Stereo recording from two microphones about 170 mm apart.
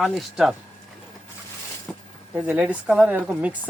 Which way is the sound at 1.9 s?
5° left (ahead or behind).